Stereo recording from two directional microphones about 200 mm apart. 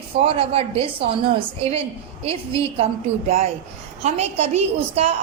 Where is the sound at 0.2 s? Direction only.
30° right (ahead or behind).